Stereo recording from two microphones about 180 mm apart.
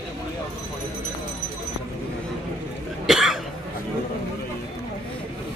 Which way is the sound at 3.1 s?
Centre (ahead or behind).